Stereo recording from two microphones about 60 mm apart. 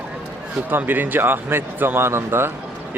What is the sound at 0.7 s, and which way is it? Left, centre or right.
Speech, right.